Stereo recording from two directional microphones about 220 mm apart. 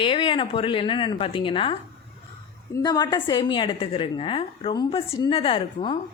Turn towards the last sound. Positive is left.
turn(degrees=25)  # may be behind; listen again after turning